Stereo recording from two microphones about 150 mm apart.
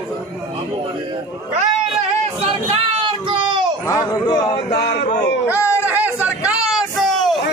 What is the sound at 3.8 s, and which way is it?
Speech, 25° left (ahead or behind).